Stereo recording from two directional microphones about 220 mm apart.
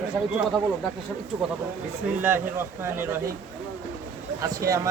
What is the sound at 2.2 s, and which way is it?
Speech, 10° right (ahead or behind).